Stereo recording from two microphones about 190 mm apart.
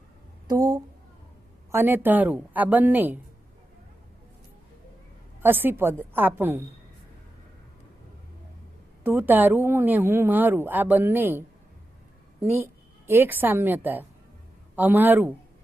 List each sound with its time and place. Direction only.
0.4 s a sound: 20° right (ahead or behind)
1.7 s a woman's voice: 10° right (ahead or behind)
5.4 s a woman's voice: 10° right (ahead or behind)
9.0 s a woman's voice: 10° right (ahead or behind)